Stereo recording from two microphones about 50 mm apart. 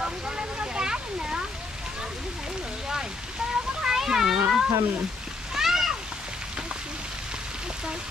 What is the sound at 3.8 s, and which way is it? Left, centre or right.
Cat, centre.